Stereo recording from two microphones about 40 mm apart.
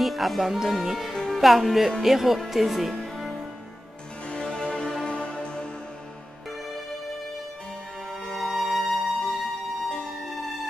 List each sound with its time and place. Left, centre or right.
0.0 s speech: centre
2.5 s music: centre
4.3 s music: centre
8.3 s music: centre